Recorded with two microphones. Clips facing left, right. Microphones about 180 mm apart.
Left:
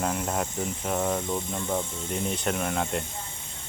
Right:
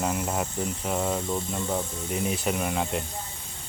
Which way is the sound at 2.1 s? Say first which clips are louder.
Right 1 dB; 5° right (ahead or behind).